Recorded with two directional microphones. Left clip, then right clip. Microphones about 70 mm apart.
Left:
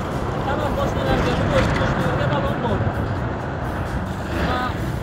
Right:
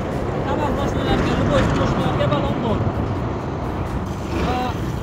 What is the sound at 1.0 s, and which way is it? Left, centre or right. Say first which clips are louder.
Speech: even; right.